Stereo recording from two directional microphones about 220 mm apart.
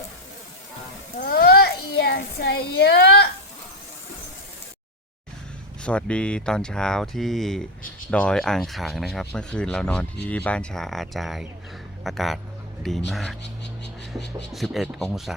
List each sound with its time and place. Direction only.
1.2 s a sound: 45° left (ahead or behind)
5.8 s speech: 5° left (ahead or behind)
14.5 s speech: centre (ahead or behind)